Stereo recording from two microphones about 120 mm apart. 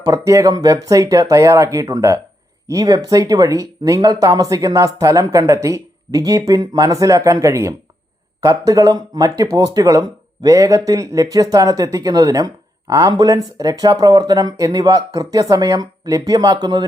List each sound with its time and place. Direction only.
0.0 s speech: 30° right (ahead or behind)